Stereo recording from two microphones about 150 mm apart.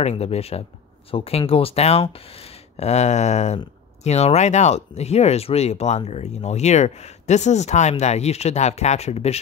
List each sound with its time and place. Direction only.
0.0 s speech: 45° left (ahead or behind)